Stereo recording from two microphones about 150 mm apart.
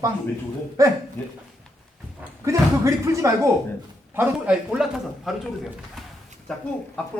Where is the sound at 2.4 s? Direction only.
20° right (ahead or behind); by 5.3 s 5° right (ahead or behind).